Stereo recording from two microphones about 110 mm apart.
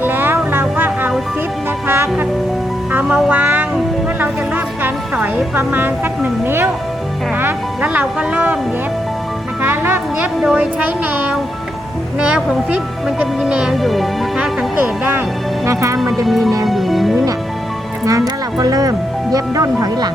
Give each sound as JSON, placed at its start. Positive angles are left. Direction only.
{"t": 0.0, "sound": "music", "side_deg": -20}
{"t": 3.2, "sound": "music", "side_deg": -15}
{"t": 5.5, "sound": "speech", "side_deg": -20}
{"t": 9.6, "sound": "music", "side_deg": -20}
{"t": 10.4, "sound": "speech", "side_deg": -10}
{"t": 14.8, "sound": "music", "side_deg": -20}
{"t": 16.0, "sound": "speech", "side_deg": 0}
{"t": 16.6, "sound": "music", "side_deg": 0}
{"t": 18.0, "sound": "speech", "side_deg": -30}